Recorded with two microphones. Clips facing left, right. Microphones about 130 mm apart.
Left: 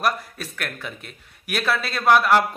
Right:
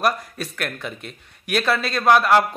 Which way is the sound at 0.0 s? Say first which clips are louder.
Right 2 dB; centre (ahead or behind).